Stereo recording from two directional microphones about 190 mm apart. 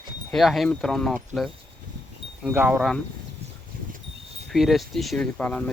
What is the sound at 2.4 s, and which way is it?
Speech, 10° right (ahead or behind).